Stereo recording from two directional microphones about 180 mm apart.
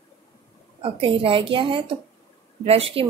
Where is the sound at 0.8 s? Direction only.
30° right (ahead or behind).